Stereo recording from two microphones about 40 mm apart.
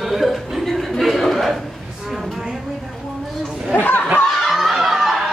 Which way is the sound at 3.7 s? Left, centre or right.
Left.